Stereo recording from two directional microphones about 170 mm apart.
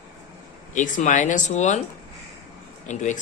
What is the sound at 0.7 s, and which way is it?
Speech, 50° left (ahead or behind).